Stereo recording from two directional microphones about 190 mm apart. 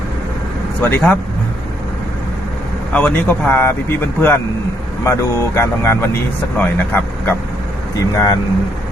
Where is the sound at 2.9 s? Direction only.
10° left (ahead or behind).